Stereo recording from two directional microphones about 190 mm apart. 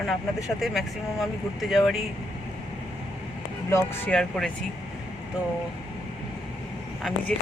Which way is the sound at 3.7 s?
10° left (ahead or behind).